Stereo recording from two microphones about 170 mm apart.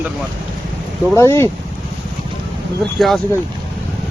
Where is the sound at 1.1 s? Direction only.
15° left (ahead or behind).